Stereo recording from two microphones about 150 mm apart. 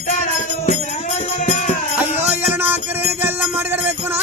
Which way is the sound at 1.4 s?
55° left (ahead or behind).